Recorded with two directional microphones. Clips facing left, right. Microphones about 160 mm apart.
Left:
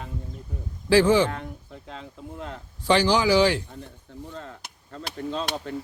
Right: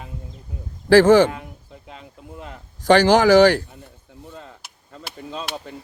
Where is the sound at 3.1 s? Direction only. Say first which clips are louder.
Right 8 dB; 45° right (ahead or behind).